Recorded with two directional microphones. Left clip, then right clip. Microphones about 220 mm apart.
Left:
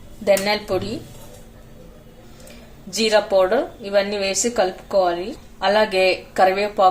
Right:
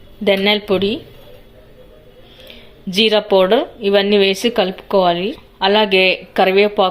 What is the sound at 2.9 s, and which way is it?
Speech, 35° right (ahead or behind).